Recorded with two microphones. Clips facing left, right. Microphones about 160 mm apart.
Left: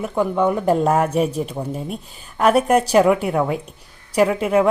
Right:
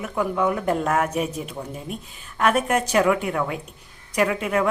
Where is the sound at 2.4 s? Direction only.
35° left (ahead or behind).